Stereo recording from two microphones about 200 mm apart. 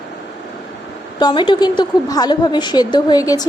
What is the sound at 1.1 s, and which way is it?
A woman's voice, 20° left (ahead or behind).